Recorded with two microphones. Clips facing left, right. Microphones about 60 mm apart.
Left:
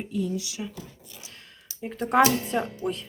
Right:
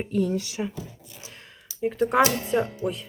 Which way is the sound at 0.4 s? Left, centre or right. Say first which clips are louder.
Right 5 dB; right.